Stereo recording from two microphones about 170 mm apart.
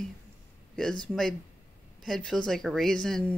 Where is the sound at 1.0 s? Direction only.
5° left (ahead or behind).